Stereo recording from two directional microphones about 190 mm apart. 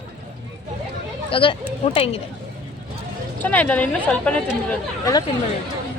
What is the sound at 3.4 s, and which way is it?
Speech, 10° left (ahead or behind).